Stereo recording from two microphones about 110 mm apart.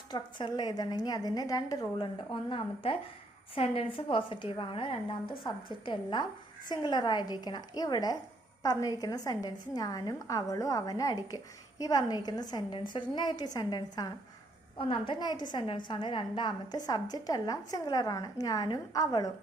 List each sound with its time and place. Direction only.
0.1 s a woman's voice: 40° left (ahead or behind)
2.3 s a woman's voice: 50° left (ahead or behind)
14.8 s a woman's voice: 55° left (ahead or behind)
15.2 s a woman's voice: 40° left (ahead or behind)